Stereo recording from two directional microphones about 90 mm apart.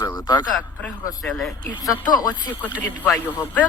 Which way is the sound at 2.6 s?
20° right (ahead or behind).